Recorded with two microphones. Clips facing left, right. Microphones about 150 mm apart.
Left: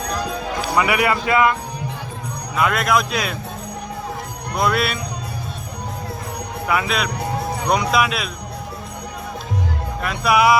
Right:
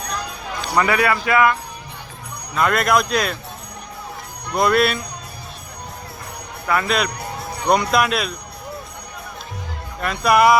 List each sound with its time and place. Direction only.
0.6 s music: 10° left (ahead or behind)
0.9 s speech: 20° left (ahead or behind)
2.6 s speech: 5° left (ahead or behind)
4.5 s speech: centre (ahead or behind)
6.7 s speech: 5° left (ahead or behind)
10.0 s speech: centre (ahead or behind)